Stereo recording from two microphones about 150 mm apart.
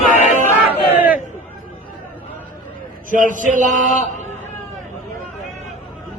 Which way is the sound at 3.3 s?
60° right (ahead or behind).